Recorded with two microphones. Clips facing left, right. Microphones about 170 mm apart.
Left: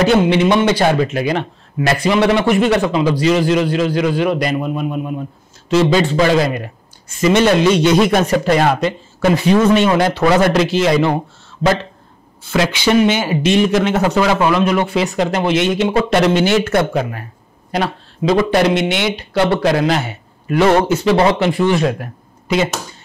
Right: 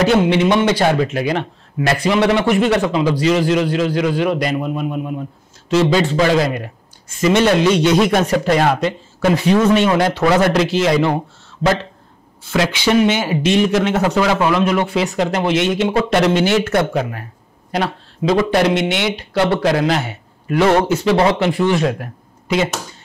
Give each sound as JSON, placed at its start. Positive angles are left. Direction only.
{"t": 0.0, "sound": "speech", "side_deg": 15}
{"t": 5.7, "sound": "speech", "side_deg": 10}